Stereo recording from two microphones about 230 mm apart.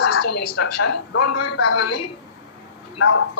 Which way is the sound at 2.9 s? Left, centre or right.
Left.